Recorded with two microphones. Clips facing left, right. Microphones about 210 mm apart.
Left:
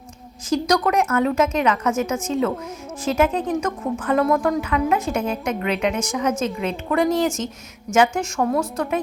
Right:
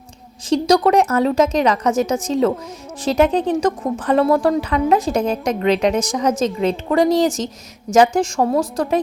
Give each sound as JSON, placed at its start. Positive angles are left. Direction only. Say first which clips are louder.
{"t": 0.5, "sound": "a woman's voice", "louder": "right 5 dB", "side_deg": -30}